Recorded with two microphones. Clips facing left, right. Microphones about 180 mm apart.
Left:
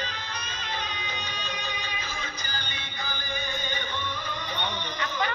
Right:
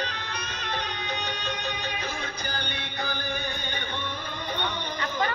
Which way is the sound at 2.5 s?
60° right (ahead or behind).